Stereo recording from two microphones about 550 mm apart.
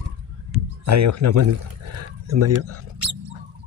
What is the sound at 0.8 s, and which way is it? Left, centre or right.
Speech, right.